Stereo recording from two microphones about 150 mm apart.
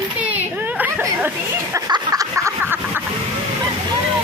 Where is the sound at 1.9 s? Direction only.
25° right (ahead or behind).